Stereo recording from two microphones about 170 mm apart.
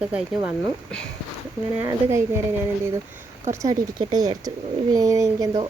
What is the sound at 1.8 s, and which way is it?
Speech, 15° right (ahead or behind).